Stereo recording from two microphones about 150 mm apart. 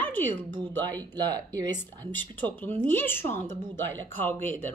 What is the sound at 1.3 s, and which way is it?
Speech, 25° right (ahead or behind).